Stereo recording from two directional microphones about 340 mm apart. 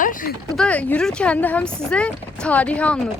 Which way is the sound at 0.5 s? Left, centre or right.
Centre.